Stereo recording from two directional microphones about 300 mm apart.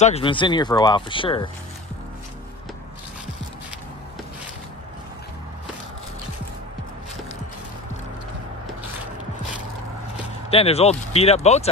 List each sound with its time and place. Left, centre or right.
0.0 s speech: centre
10.5 s speech: centre